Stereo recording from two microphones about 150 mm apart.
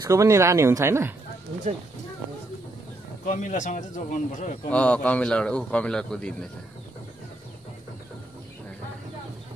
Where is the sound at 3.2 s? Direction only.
60° left (ahead or behind).